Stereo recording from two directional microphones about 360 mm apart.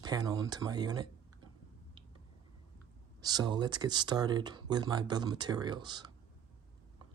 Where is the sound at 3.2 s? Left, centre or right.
Centre.